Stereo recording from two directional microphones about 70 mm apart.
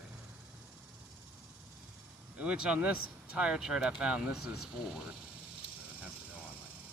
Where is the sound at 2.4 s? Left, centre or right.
Centre.